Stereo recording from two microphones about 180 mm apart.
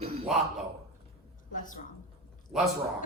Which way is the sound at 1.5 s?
45° left (ahead or behind).